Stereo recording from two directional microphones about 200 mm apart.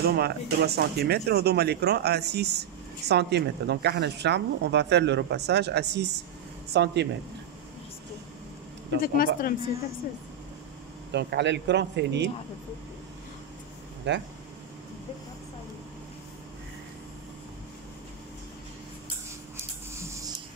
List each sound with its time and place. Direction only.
0.0 s a woman's voice: 50° right (ahead or behind)
9.0 s speech: 45° left (ahead or behind)
11.1 s a woman's voice: 60° right (ahead or behind)
14.1 s a woman's voice: 60° right (ahead or behind)